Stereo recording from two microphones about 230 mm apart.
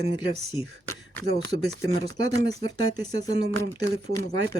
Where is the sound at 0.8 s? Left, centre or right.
Centre.